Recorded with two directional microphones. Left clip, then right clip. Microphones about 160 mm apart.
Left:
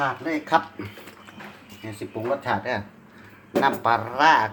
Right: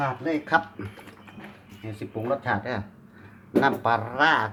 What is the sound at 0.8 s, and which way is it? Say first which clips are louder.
Speech: left 2 dB; 5° right (ahead or behind).